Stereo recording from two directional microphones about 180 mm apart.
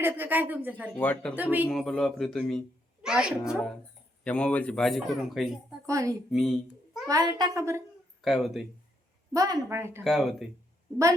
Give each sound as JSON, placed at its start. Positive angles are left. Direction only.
{"t": 0.0, "sound": "speech", "side_deg": -10}
{"t": 0.9, "sound": "speech", "side_deg": 10}
{"t": 1.4, "sound": "speech", "side_deg": -10}
{"t": 1.7, "sound": "speech", "side_deg": 0}
{"t": 4.2, "sound": "speech", "side_deg": 5}
{"t": 5.8, "sound": "a child's voice", "side_deg": -20}
{"t": 6.3, "sound": "babbling", "side_deg": 0}
{"t": 7.1, "sound": "a child's voice", "side_deg": -20}
{"t": 8.2, "sound": "speech", "side_deg": 0}
{"t": 9.3, "sound": "speech", "side_deg": -20}
{"t": 10.0, "sound": "speech", "side_deg": 0}